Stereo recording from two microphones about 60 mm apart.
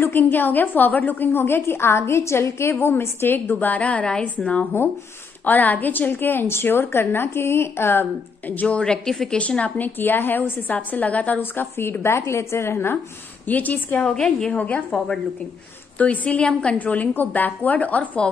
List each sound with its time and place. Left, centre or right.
0.0 s a woman's voice: left
8.7 s a woman's voice: centre
9.4 s a woman's voice: centre
9.9 s a woman's voice: left
11.8 s a woman's voice: left
13.5 s a woman's voice: left
14.0 s a woman's voice: centre
14.6 s a woman's voice: left
16.0 s a woman's voice: left